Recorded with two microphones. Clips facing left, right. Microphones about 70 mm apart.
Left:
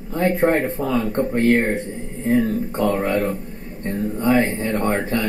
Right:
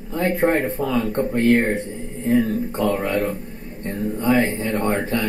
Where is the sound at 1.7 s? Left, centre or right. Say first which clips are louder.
Even; left.